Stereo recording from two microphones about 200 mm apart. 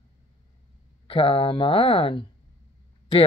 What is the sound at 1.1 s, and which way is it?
Speech, 25° left (ahead or behind).